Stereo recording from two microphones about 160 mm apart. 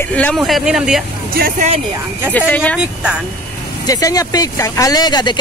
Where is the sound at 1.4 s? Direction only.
65° right (ahead or behind).